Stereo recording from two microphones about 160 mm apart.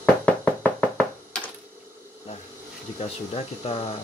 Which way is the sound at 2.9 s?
40° left (ahead or behind).